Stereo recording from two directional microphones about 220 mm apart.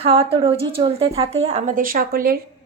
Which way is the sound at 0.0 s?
25° right (ahead or behind).